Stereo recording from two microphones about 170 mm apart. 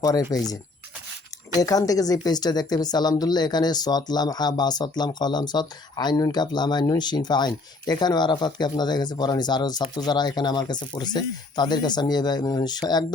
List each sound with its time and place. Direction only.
0.0 s a woman's voice: 20° left (ahead or behind)
1.5 s a woman's voice: 20° left (ahead or behind)